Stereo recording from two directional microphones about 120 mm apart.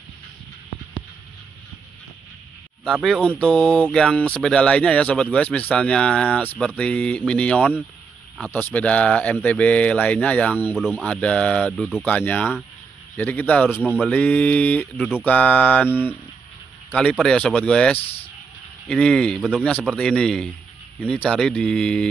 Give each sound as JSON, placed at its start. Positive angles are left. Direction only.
{"t": 2.8, "sound": "speech", "side_deg": 0}
{"t": 10.8, "sound": "speech", "side_deg": -5}
{"t": 11.1, "sound": "speech", "side_deg": 10}
{"t": 17.9, "sound": "speech", "side_deg": 55}
{"t": 18.9, "sound": "speech", "side_deg": 5}